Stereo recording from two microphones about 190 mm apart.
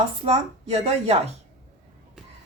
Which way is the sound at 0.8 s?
30° right (ahead or behind).